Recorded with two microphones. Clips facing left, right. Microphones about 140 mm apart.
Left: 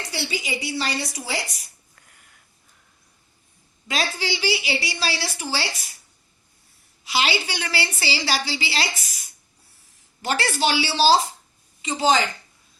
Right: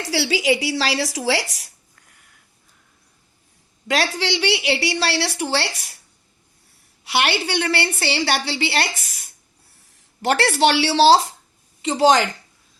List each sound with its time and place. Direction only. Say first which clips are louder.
0.0 s speech: right 9 dB; 90° right
3.8 s a woman's voice: right 5 dB; 70° right (ahead or behind)
7.0 s a woman's voice: right 3 dB; 65° right (ahead or behind)